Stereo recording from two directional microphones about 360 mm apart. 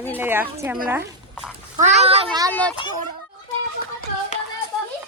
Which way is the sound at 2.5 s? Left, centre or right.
Centre.